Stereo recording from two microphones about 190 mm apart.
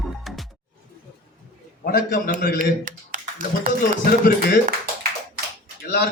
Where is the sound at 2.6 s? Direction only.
45° right (ahead or behind).